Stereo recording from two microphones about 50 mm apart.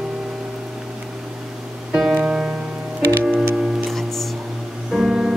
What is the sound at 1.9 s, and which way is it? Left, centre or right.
Music, centre.